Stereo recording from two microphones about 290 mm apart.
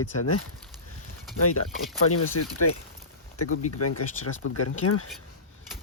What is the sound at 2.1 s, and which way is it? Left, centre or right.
Speech, left.